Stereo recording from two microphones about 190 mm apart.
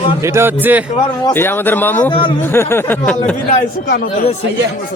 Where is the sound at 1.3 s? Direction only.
10° left (ahead or behind).